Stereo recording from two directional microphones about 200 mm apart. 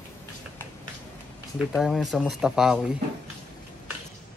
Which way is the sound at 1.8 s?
Centre (ahead or behind).